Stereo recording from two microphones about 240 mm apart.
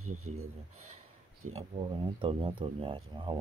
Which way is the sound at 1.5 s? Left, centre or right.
Right.